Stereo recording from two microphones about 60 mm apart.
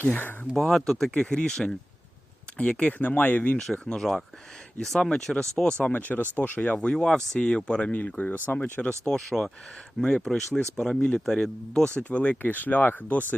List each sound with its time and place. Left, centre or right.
0.0 s speech: left
0.5 s speech: centre; by 3.6 s left
3.8 s speech: centre
5.8 s speech: left
6.7 s speech: centre; by 8.9 s left
8.9 s speech: centre
12.0 s speech: left